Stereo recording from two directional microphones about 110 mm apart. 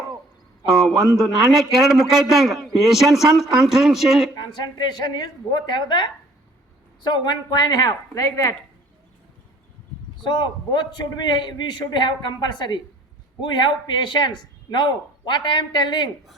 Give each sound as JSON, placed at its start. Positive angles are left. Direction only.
{"t": 0.7, "sound": "a man's voice", "side_deg": -5}
{"t": 4.4, "sound": "a woman's voice", "side_deg": 40}
{"t": 10.2, "sound": "a man's voice", "side_deg": 45}